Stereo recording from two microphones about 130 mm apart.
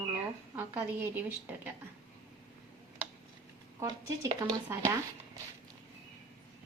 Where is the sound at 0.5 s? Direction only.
15° right (ahead or behind).